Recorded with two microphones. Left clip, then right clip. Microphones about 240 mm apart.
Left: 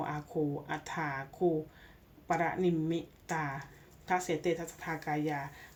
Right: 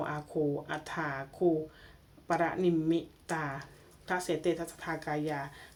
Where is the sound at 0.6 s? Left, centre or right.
Right.